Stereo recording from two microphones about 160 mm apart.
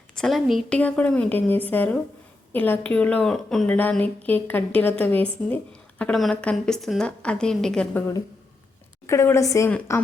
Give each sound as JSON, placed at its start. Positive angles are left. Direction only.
{"t": 0.2, "sound": "a woman's voice", "side_deg": 0}
{"t": 0.8, "sound": "a woman's voice", "side_deg": 10}
{"t": 9.0, "sound": "a woman's voice", "side_deg": 15}